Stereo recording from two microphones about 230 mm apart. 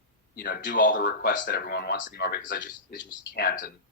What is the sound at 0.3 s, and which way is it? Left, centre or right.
A man's voice, left.